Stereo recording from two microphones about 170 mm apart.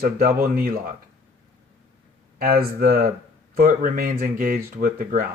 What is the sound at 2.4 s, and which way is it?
Speech, 60° right (ahead or behind).